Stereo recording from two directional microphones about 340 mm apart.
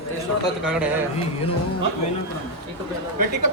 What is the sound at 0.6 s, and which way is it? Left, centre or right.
Speech, centre.